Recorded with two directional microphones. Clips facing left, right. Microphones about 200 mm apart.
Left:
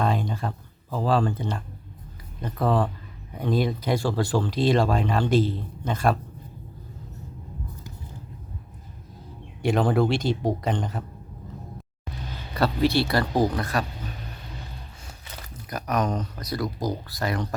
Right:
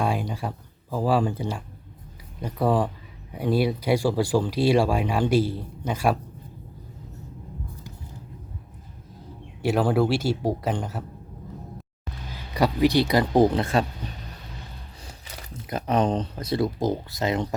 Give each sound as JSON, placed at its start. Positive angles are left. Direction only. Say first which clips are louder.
{"t": 0.0, "sound": "speech", "louder": "left 1 dB", "side_deg": -10}
{"t": 9.6, "sound": "speech", "louder": "even", "side_deg": -5}
{"t": 12.5, "sound": "speech", "louder": "right 2 dB", "side_deg": -15}
{"t": 15.7, "sound": "speech", "louder": "right 3 dB", "side_deg": -30}